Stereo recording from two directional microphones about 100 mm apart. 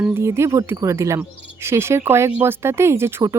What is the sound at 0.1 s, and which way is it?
Speech, 25° right (ahead or behind).